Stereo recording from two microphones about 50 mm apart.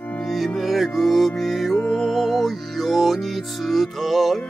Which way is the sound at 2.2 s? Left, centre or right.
Centre.